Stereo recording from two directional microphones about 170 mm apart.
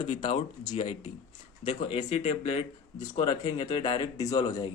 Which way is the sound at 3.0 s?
25° left (ahead or behind).